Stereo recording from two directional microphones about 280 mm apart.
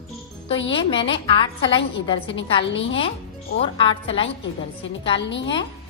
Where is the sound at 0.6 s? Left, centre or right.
Centre.